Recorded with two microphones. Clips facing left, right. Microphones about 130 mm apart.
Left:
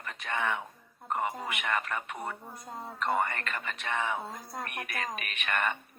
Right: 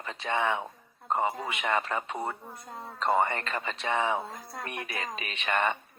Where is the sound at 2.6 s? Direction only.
10° left (ahead or behind).